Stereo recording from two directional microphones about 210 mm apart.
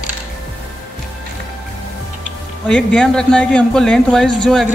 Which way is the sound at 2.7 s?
5° left (ahead or behind).